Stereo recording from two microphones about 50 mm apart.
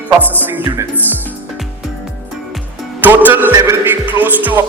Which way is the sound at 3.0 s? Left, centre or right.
Right.